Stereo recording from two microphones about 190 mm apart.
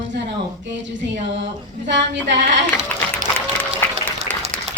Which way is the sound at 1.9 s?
70° right (ahead or behind).